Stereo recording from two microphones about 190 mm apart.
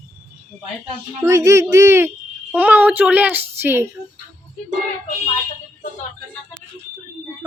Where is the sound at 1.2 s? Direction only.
15° right (ahead or behind).